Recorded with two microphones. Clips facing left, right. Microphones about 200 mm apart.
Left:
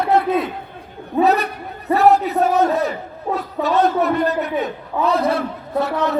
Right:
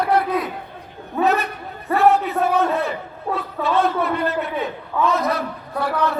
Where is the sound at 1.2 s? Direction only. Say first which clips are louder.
Left 1 dB; 35° left (ahead or behind).